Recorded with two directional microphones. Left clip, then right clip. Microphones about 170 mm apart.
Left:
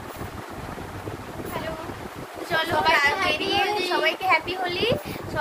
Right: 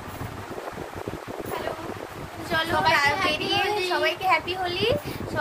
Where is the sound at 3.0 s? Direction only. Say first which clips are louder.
Left 1 dB; 25° right (ahead or behind).